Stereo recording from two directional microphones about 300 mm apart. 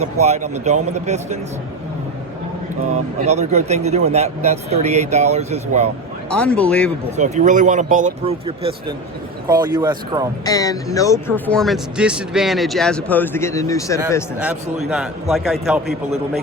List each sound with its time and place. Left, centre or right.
0.2 s speech: right
2.9 s speech: right
6.3 s speech: centre
7.2 s speech: right
10.4 s speech: centre
14.3 s speech: centre